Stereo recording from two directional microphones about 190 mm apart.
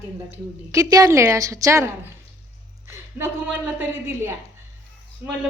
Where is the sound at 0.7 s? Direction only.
15° right (ahead or behind).